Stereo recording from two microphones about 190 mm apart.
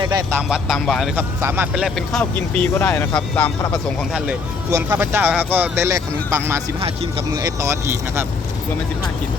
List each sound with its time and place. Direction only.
0.0 s speech: 20° right (ahead or behind)
0.3 s speech: 5° right (ahead or behind)
1.4 s speech: 10° right (ahead or behind); by 3.8 s 10° left (ahead or behind)
4.7 s speech: 10° right (ahead or behind)
6.7 s speech: 30° right (ahead or behind)
7.3 s speech: 15° right (ahead or behind)